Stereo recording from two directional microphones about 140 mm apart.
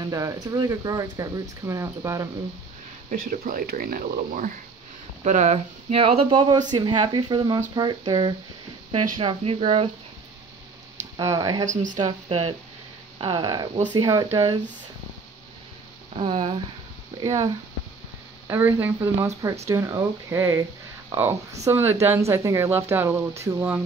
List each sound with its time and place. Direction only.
0.0 s speech: 25° right (ahead or behind)
3.1 s speech: 80° right
5.2 s speech: 55° right (ahead or behind); by 8.4 s 30° right (ahead or behind)
8.9 s speech: 40° right (ahead or behind)
11.1 s speech: 25° right (ahead or behind)
11.6 s speech: 65° right (ahead or behind)
12.3 s speech: 45° right (ahead or behind)
13.2 s speech: 35° right (ahead or behind)
16.2 s speech: 35° right (ahead or behind)
17.2 s speech: 25° right (ahead or behind)
18.5 s speech: 15° right (ahead or behind)